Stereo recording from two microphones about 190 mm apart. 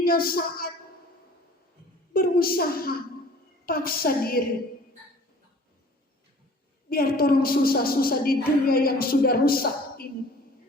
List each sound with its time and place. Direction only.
0.0 s a woman's voice: 50° left (ahead or behind)
2.1 s a woman's voice: 50° left (ahead or behind)
6.9 s a woman's voice: 50° left (ahead or behind)